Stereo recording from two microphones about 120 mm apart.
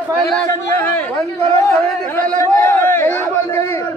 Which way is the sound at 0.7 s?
15° left (ahead or behind).